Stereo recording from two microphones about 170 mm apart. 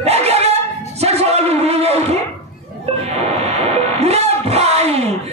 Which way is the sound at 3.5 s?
40° right (ahead or behind).